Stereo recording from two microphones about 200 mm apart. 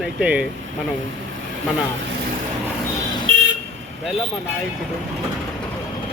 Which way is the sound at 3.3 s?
75° right (ahead or behind).